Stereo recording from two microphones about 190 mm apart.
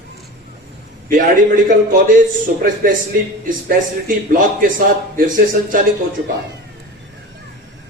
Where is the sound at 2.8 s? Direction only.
50° right (ahead or behind).